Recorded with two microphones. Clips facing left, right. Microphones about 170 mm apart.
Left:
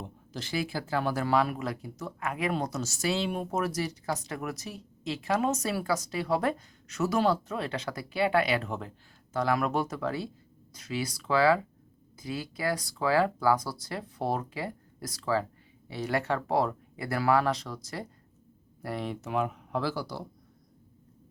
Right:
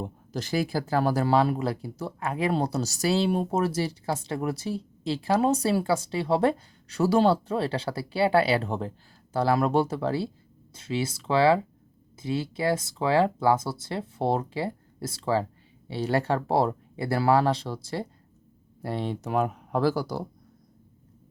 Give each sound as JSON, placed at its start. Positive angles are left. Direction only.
{"t": 0.0, "sound": "speech", "side_deg": -45}